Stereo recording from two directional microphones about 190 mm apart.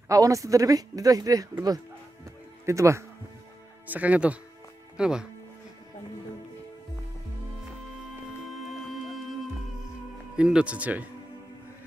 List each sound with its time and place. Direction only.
0.1 s speech: 15° right (ahead or behind)
8.6 s music: centre (ahead or behind)
10.3 s speech: 5° right (ahead or behind)